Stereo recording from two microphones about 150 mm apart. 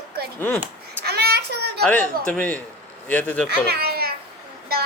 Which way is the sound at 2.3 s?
10° left (ahead or behind).